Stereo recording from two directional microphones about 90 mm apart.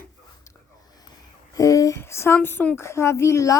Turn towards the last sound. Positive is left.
turn(degrees=35)  # may be behind; listen again after turning